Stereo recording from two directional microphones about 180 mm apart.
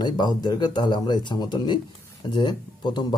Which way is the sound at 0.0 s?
25° left (ahead or behind).